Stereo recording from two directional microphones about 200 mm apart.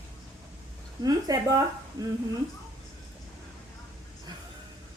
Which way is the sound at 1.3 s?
20° right (ahead or behind).